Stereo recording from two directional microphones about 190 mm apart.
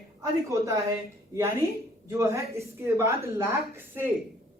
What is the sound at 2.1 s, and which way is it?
A woman's voice, 15° right (ahead or behind).